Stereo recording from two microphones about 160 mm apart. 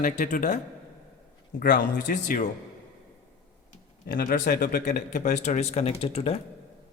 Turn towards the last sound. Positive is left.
turn(degrees=40)  # may be behind; listen again after turning